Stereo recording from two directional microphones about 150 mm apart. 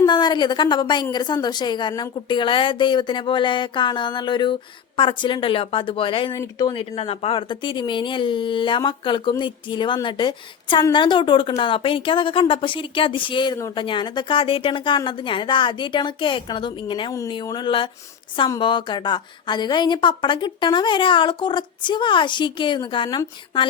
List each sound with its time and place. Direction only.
0.0 s a woman's voice: 30° left (ahead or behind)
6.3 s speech: 25° left (ahead or behind)
6.9 s a woman's voice: 45° left (ahead or behind)